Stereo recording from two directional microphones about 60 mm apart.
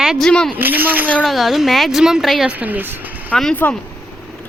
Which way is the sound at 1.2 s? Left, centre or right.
Centre.